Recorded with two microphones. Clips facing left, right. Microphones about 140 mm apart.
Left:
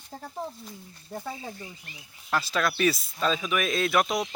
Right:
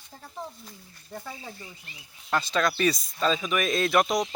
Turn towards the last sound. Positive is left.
turn(degrees=0)  # may be behind; listen again after turning